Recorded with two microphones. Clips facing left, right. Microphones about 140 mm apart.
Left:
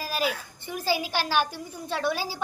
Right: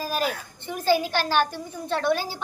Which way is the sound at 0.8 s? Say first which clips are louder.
Right 5 dB; 10° left (ahead or behind).